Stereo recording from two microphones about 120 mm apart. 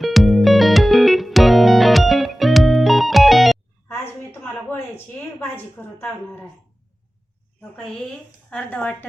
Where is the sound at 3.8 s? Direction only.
20° left (ahead or behind).